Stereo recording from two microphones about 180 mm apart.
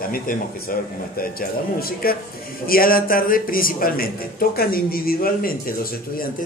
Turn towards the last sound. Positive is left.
turn(degrees=55)  # may be behind; listen again after turning